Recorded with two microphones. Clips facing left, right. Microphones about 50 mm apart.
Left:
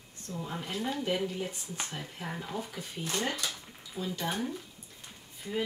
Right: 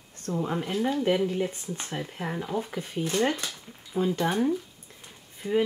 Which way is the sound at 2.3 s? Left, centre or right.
Centre.